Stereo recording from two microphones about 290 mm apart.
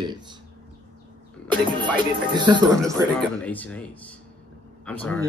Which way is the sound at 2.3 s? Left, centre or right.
Centre.